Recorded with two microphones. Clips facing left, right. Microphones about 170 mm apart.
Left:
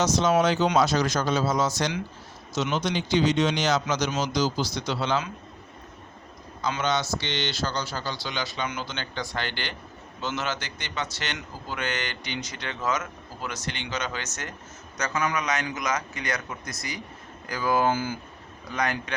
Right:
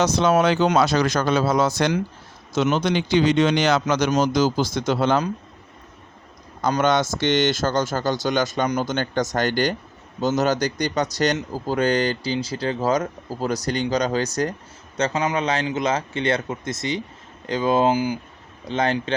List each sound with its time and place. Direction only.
0.0 s a man's voice: 60° right (ahead or behind)
6.6 s a man's voice: 50° right (ahead or behind); by 18.2 s 15° right (ahead or behind)
18.7 s a man's voice: 25° right (ahead or behind)